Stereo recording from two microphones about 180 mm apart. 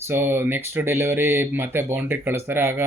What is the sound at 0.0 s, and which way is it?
Speech, 15° right (ahead or behind).